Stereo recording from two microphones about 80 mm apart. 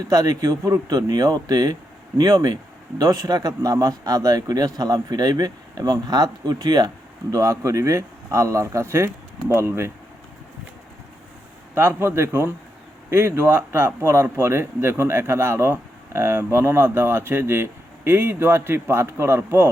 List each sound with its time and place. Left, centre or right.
0.0 s speech: right
11.7 s speech: right